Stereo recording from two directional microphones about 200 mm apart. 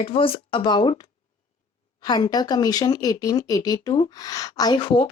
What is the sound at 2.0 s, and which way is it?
Speech, 20° left (ahead or behind).